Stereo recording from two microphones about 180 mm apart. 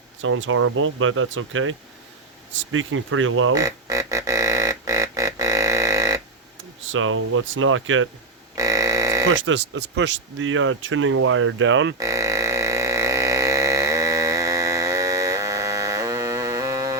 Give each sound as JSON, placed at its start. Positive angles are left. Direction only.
{"t": 0.2, "sound": "speech", "side_deg": -90}
{"t": 3.5, "sound": "music", "side_deg": -20}
{"t": 6.9, "sound": "speech", "side_deg": -90}
{"t": 8.5, "sound": "a sound", "side_deg": -20}
{"t": 9.3, "sound": "speech", "side_deg": -90}
{"t": 11.9, "sound": "a sound", "side_deg": -15}